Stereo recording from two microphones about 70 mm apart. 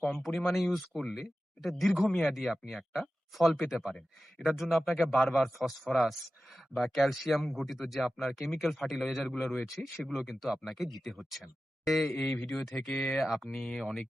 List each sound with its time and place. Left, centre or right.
0.0 s speech: centre
12.1 s speech: left
12.6 s speech: centre
12.9 s speech: centre
13.1 s speech: centre